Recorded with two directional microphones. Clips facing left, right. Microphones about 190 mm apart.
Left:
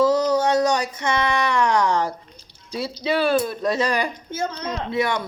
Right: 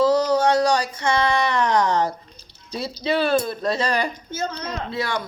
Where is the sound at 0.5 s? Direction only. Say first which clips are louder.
Even; 20° left (ahead or behind).